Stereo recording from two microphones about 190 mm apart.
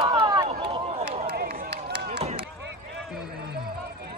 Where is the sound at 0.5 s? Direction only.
30° right (ahead or behind).